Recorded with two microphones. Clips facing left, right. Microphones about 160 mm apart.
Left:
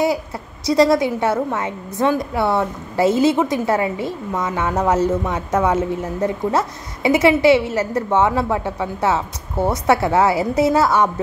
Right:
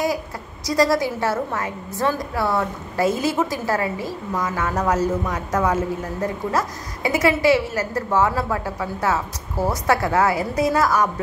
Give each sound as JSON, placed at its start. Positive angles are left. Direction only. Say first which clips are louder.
{"t": 0.7, "sound": "a woman's voice", "louder": "left 4 dB", "side_deg": 25}